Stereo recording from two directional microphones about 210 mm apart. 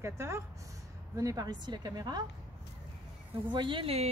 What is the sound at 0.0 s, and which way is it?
A woman's voice, 10° right (ahead or behind).